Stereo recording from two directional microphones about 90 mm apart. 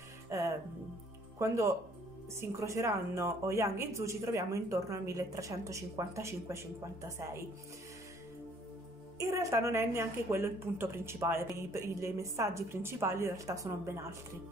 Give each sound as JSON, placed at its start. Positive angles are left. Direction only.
{"t": 0.3, "sound": "music", "side_deg": -35}
{"t": 1.4, "sound": "speech", "side_deg": -35}
{"t": 9.2, "sound": "a woman's voice", "side_deg": -35}